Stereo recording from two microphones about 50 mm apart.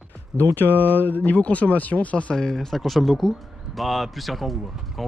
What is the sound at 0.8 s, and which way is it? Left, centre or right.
Speech, left.